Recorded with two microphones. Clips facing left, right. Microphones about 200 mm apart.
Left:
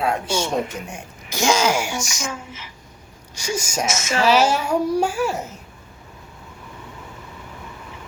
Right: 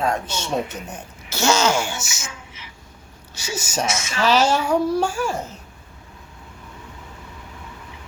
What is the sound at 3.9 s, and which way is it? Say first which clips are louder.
Speech: left 2 dB; 45° left (ahead or behind).